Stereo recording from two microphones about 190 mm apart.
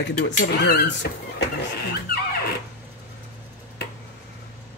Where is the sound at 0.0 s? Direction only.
55° left (ahead or behind).